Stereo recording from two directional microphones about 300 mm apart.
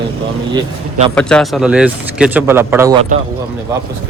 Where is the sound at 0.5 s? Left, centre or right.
Centre.